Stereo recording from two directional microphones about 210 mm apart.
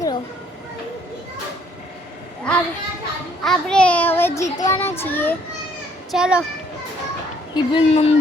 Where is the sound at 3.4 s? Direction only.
Centre (ahead or behind).